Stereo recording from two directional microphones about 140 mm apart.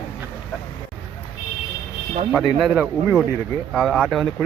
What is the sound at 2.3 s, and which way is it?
Speech, centre (ahead or behind).